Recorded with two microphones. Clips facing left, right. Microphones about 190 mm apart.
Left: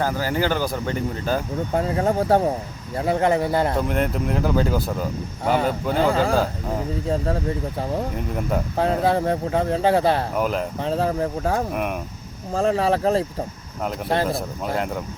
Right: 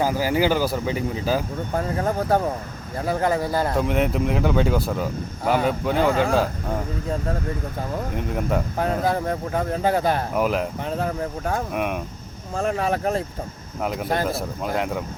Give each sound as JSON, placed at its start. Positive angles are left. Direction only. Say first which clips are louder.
{"t": 0.0, "sound": "speech", "louder": "right 2 dB", "side_deg": -10}
{"t": 1.7, "sound": "speech", "louder": "left 3 dB", "side_deg": 25}
{"t": 3.8, "sound": "speech", "louder": "right 1 dB", "side_deg": 0}
{"t": 8.1, "sound": "speech", "louder": "right 1 dB", "side_deg": 0}
{"t": 8.8, "sound": "speech", "louder": "left 5 dB", "side_deg": 30}
{"t": 10.3, "sound": "speech", "louder": "right 1 dB", "side_deg": 0}
{"t": 10.8, "sound": "speech", "louder": "left 4 dB", "side_deg": 30}
{"t": 11.7, "sound": "speech", "louder": "even", "side_deg": 0}
{"t": 12.5, "sound": "speech", "louder": "left 3 dB", "side_deg": 30}
{"t": 13.8, "sound": "speech", "louder": "left 1 dB", "side_deg": 0}